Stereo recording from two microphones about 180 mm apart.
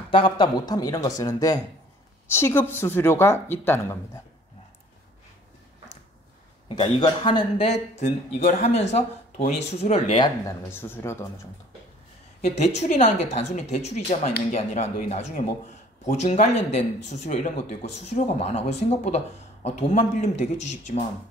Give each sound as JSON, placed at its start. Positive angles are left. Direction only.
{"t": 0.1, "sound": "speech", "side_deg": 25}
{"t": 6.7, "sound": "speech", "side_deg": 25}
{"t": 10.4, "sound": "speech", "side_deg": 15}
{"t": 12.5, "sound": "speech", "side_deg": 40}